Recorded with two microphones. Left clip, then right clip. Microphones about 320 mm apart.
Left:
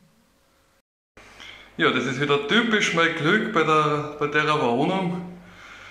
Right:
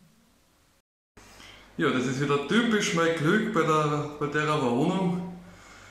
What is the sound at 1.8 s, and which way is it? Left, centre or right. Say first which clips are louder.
A man's voice: left 5 dB; centre.